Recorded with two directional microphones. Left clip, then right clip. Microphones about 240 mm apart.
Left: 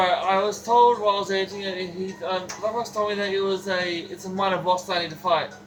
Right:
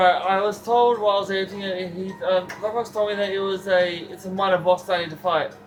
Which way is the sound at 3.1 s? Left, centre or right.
Centre.